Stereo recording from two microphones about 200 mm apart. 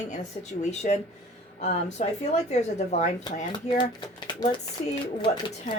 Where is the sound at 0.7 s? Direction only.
35° left (ahead or behind).